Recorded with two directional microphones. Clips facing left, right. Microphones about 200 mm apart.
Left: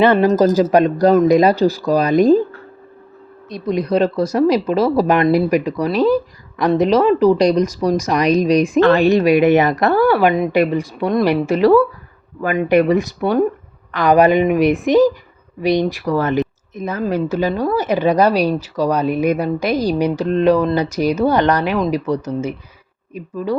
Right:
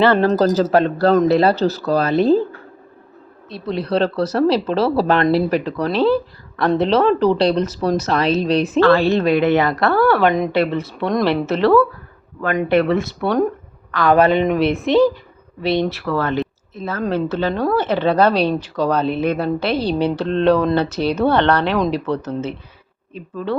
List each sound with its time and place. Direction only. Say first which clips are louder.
0.0 s speech: left 2 dB; 15° left (ahead or behind)
3.5 s speech: left 3 dB; 15° left (ahead or behind)